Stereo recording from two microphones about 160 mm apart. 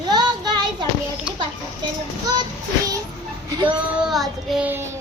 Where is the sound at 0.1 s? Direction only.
25° right (ahead or behind).